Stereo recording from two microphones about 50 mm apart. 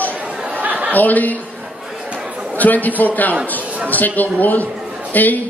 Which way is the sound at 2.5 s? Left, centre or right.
Left.